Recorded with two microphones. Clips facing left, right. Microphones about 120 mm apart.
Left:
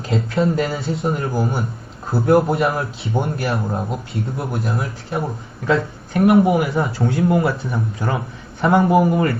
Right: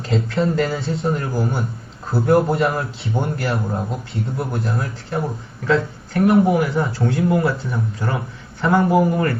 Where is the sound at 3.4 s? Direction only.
20° left (ahead or behind).